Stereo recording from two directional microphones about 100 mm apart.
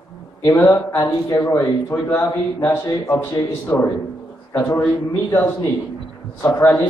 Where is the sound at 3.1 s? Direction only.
20° left (ahead or behind).